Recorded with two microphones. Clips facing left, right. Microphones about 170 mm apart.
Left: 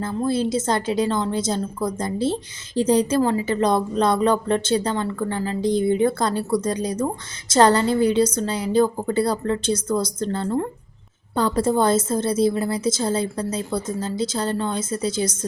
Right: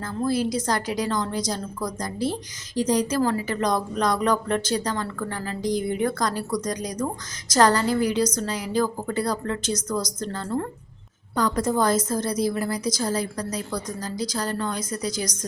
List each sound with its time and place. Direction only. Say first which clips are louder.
0.0 s a woman's voice: left 2 dB; 25° left (ahead or behind)